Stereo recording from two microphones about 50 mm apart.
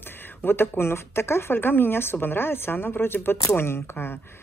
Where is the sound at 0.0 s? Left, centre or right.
Left.